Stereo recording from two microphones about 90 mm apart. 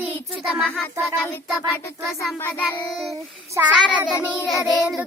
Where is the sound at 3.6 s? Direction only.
15° right (ahead or behind).